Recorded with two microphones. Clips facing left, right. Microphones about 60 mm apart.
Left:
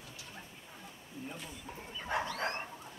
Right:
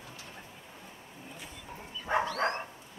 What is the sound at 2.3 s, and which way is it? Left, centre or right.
Dog, right.